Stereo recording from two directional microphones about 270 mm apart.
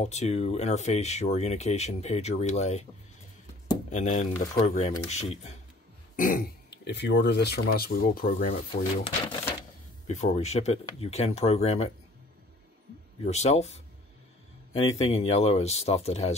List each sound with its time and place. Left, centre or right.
0.0 s speech: left
3.9 s speech: left
13.2 s speech: left